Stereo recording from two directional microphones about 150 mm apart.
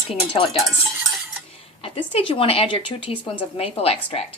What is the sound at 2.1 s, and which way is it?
A woman's voice, 35° left (ahead or behind).